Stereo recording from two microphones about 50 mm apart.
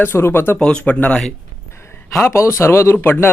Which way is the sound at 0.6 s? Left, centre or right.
Centre.